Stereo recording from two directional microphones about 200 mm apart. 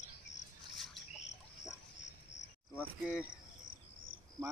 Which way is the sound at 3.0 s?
5° right (ahead or behind).